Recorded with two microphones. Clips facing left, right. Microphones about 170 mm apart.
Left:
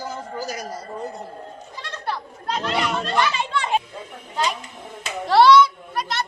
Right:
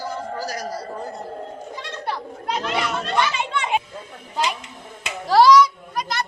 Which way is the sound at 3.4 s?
20° right (ahead or behind).